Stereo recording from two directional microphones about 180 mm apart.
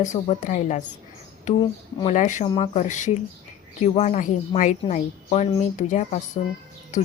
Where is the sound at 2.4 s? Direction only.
30° left (ahead or behind).